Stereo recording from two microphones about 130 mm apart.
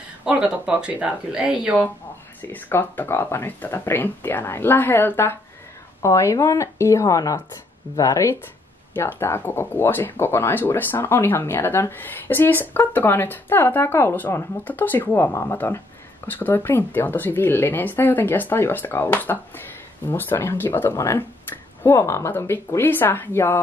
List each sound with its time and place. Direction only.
0.2 s speech: 10° right (ahead or behind)
2.4 s speech: 15° left (ahead or behind)